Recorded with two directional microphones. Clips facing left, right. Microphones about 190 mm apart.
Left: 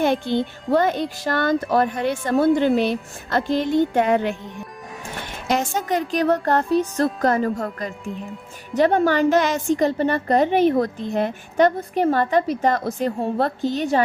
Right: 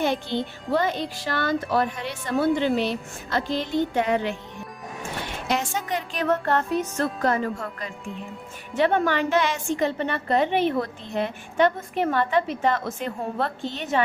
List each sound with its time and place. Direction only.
0.0 s a child's voice: 55° left (ahead or behind)
5.5 s a woman's voice: 45° left (ahead or behind)